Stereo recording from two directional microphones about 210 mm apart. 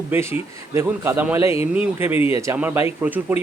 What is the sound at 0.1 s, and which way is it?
A man's voice, 10° right (ahead or behind).